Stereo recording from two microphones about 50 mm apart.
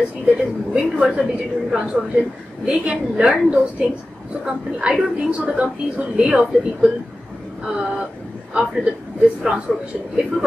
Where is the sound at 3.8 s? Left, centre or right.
Centre.